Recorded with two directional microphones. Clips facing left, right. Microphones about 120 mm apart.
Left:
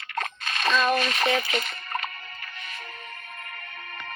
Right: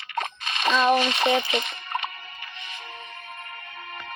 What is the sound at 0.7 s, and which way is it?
Speech, 25° right (ahead or behind).